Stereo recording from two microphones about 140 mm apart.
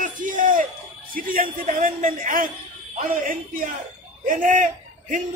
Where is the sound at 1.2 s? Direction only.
90° right.